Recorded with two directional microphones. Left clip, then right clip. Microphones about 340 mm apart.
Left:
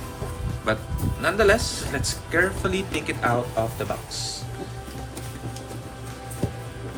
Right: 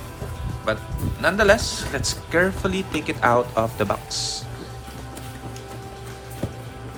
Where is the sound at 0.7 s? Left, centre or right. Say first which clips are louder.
Right 1 dB; centre.